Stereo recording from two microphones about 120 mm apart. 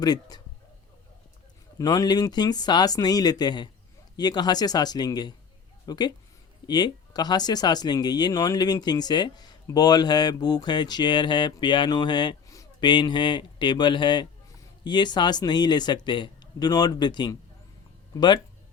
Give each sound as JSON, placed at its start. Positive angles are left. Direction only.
{"t": 0.0, "sound": "speech", "side_deg": 35}
{"t": 1.8, "sound": "speech", "side_deg": 35}